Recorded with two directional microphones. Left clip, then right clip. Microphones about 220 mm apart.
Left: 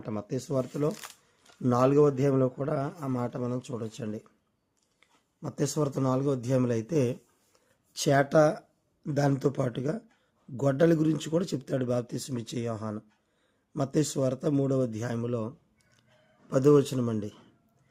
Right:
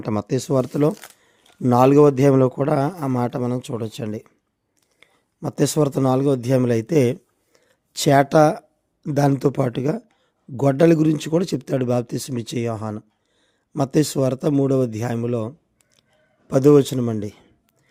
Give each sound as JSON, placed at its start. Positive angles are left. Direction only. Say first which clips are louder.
{"t": 0.0, "sound": "speech", "louder": "right 11 dB", "side_deg": -50}